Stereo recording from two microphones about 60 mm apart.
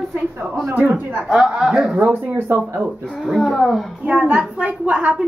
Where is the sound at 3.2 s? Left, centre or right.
Centre.